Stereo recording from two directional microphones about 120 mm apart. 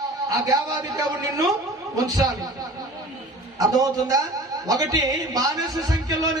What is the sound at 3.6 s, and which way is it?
A man's voice, 30° right (ahead or behind).